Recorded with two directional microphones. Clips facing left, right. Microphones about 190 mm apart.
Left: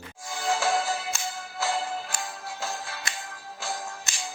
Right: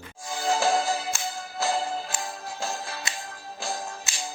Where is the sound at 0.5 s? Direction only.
40° right (ahead or behind).